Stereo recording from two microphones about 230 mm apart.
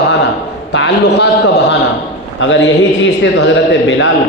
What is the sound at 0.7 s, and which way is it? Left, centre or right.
A man's voice, left.